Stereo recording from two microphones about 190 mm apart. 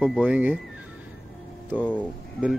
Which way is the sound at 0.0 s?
5° right (ahead or behind).